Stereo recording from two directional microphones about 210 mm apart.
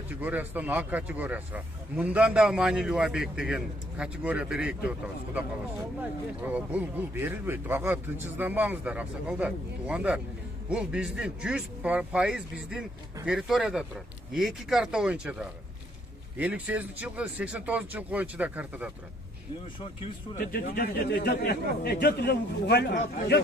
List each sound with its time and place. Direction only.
0.1 s speech: 10° right (ahead or behind)
20.3 s a man's voice: 45° left (ahead or behind)